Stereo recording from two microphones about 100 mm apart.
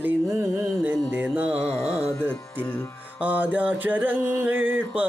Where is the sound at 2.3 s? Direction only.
15° left (ahead or behind).